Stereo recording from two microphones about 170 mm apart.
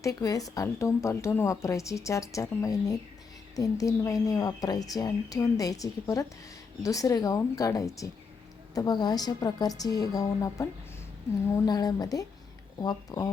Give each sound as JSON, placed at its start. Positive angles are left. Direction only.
{"t": 0.0, "sound": "a woman's voice", "side_deg": 20}